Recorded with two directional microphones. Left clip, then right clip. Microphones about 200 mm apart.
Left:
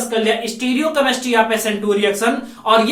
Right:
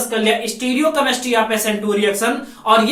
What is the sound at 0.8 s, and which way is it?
Speech, 20° left (ahead or behind).